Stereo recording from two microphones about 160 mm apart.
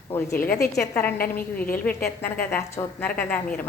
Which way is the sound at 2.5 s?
15° left (ahead or behind).